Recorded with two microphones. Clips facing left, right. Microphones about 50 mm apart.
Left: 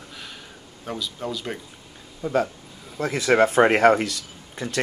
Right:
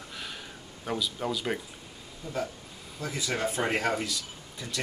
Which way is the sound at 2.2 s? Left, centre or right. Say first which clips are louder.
Left 10 dB; left.